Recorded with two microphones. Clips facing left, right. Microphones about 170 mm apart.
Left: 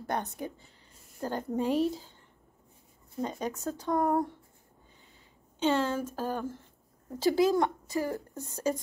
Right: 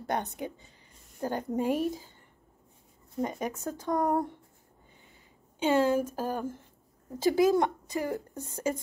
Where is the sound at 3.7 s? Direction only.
50° right (ahead or behind).